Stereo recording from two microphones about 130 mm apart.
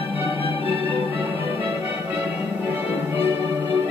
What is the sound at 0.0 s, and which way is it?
Music, 15° right (ahead or behind).